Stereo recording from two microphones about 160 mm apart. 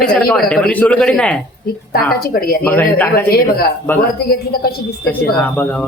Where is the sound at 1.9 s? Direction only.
70° left (ahead or behind).